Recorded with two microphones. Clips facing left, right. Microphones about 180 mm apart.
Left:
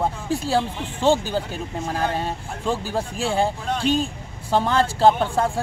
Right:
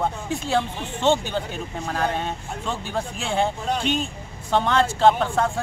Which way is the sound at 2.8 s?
35° left (ahead or behind).